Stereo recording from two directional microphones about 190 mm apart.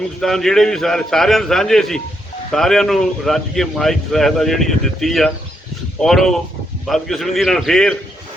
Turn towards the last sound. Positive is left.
turn(degrees=5)  # may be behind; listen again after turning